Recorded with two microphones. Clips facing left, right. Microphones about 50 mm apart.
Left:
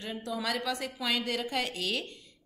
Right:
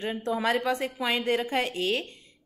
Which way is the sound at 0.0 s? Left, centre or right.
Right.